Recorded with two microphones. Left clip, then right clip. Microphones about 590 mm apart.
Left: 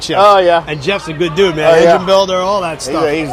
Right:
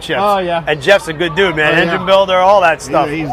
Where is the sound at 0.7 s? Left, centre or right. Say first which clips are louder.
Right 6 dB; right.